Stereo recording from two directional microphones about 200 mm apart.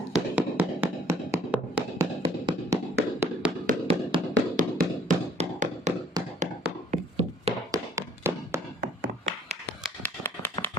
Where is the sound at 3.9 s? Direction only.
25° right (ahead or behind).